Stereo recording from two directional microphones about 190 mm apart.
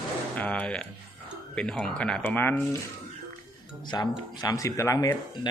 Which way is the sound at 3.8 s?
20° left (ahead or behind).